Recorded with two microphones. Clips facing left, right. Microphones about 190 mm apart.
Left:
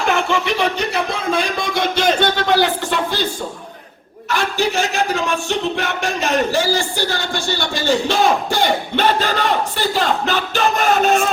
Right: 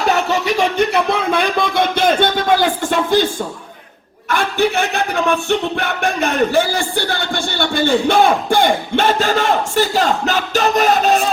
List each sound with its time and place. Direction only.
0.1 s speech: 40° right (ahead or behind)
4.3 s a man's voice: 55° right (ahead or behind); by 11.3 s 35° right (ahead or behind)